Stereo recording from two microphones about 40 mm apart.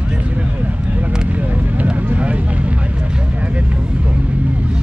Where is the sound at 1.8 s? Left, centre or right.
Right.